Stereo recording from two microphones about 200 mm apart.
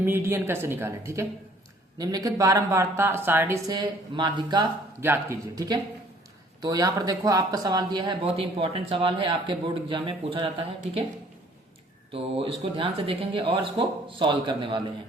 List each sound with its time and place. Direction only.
0.0 s speech: 10° right (ahead or behind); by 10.7 s 25° right (ahead or behind)
12.1 s speech: 30° right (ahead or behind)